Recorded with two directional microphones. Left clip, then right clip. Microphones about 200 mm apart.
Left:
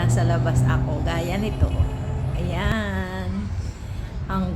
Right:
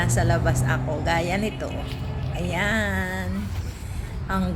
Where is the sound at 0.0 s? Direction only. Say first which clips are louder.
Right 1 dB; 5° right (ahead or behind).